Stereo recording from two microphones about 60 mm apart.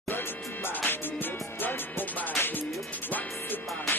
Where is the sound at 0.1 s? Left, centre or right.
Left.